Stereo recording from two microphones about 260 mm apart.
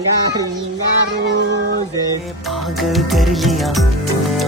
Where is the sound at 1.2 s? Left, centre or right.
Right.